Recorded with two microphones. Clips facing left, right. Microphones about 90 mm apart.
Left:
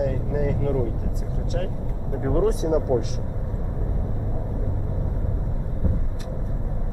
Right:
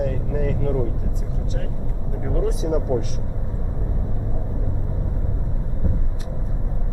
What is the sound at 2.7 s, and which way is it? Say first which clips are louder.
Speech: left 1 dB; 15° left (ahead or behind).